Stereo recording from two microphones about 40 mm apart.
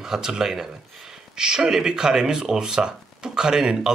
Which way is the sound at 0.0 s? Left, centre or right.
Centre.